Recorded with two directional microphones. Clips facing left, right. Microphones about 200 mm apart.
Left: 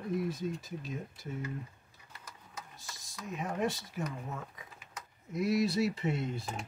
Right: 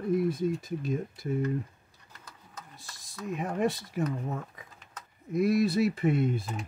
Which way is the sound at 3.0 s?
60° right (ahead or behind).